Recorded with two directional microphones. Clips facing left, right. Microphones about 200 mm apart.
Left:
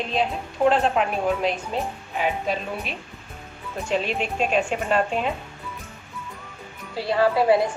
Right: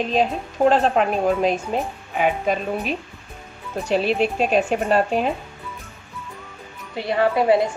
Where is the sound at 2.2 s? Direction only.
45° right (ahead or behind).